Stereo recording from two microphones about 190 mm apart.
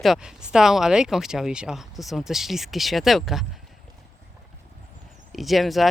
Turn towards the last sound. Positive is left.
turn(degrees=0)  # may be behind; listen again after turning